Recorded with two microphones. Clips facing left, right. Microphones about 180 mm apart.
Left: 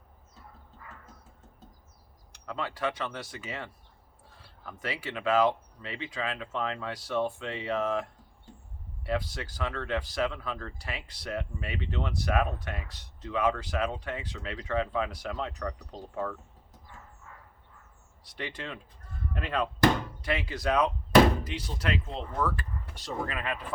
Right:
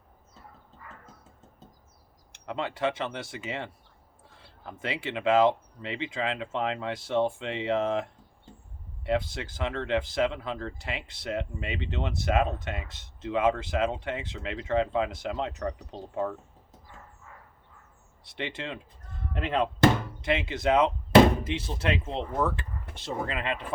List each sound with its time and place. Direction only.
2.3 s speech: 25° right (ahead or behind)
18.3 s speech: 25° right (ahead or behind)